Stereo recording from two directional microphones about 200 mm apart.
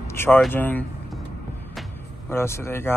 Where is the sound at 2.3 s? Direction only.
10° left (ahead or behind).